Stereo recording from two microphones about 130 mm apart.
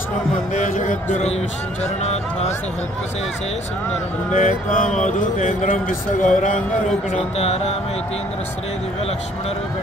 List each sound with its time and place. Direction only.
0.6 s speech: 70° left (ahead or behind)
1.1 s speech: 60° left (ahead or behind)
4.3 s speech: 80° left